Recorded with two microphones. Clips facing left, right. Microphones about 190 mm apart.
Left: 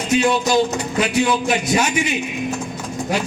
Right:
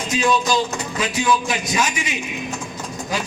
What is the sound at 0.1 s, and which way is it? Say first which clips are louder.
A man's voice: left 3 dB; 65° left (ahead or behind).